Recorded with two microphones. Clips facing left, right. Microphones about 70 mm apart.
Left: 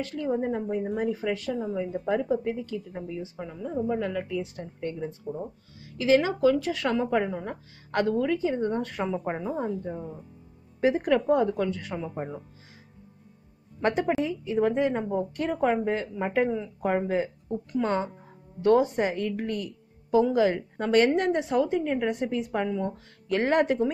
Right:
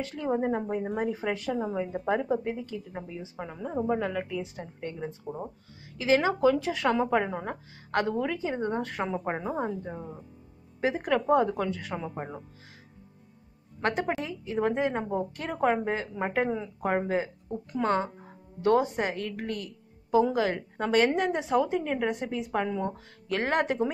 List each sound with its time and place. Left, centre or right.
0.0 s a woman's voice: centre
6.7 s a woman's voice: centre
9.0 s speech: right
9.4 s a woman's voice: centre
13.8 s a woman's voice: centre